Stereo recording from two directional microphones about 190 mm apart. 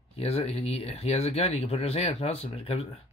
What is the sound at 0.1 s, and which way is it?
Speech, 30° left (ahead or behind).